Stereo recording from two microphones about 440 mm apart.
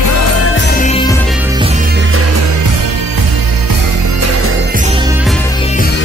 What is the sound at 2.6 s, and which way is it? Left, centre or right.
Music, right.